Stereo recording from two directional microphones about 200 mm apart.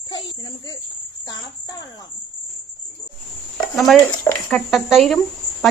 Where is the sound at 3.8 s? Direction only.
Centre (ahead or behind).